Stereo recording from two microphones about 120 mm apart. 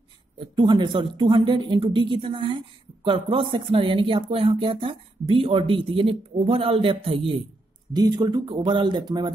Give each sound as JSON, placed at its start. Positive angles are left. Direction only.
{"t": 0.6, "sound": "speech", "side_deg": -40}
{"t": 7.9, "sound": "speech", "side_deg": -35}
{"t": 8.5, "sound": "speech", "side_deg": -45}